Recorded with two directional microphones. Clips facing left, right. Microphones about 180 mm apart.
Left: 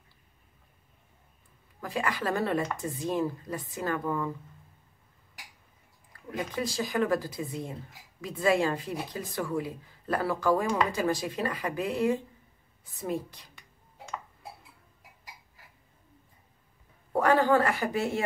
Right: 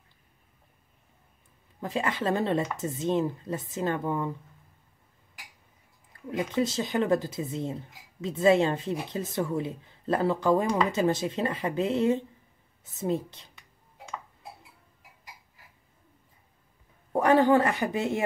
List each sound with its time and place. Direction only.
1.8 s speech: 25° right (ahead or behind)
6.3 s speech: 25° right (ahead or behind)
17.1 s speech: 20° right (ahead or behind)